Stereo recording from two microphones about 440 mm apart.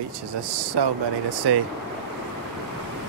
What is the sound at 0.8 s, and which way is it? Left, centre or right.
Speech, right.